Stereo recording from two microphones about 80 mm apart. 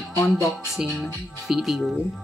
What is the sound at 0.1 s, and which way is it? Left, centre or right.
Speech, left.